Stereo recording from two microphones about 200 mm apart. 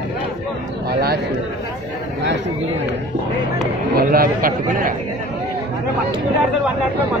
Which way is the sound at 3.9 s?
45° right (ahead or behind).